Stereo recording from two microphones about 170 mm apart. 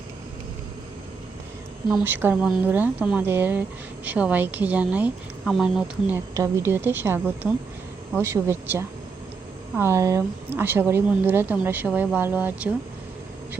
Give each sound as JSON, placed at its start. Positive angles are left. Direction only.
{"t": 2.0, "sound": "speech", "side_deg": -10}
{"t": 6.3, "sound": "speech", "side_deg": -15}